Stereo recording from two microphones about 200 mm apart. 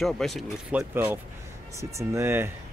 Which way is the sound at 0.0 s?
Centre (ahead or behind).